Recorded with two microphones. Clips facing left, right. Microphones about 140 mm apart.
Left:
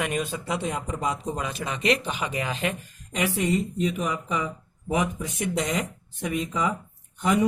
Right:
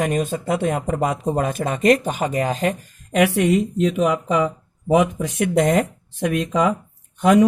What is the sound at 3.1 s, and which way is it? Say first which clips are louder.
Speech: right 8 dB; 65° right (ahead or behind).